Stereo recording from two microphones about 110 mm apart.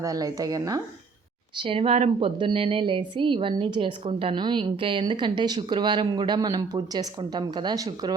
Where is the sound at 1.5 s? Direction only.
55° right (ahead or behind).